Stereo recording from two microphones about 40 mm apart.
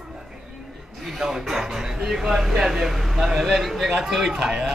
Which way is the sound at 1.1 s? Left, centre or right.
Centre.